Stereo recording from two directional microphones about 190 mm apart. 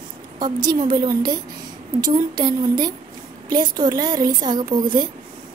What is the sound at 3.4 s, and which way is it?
A woman's voice, 20° right (ahead or behind).